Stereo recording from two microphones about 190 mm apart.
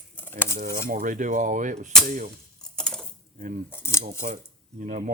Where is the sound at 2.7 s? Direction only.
5° left (ahead or behind).